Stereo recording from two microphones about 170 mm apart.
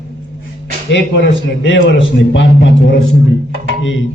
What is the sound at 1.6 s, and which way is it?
A man's voice, 90° left.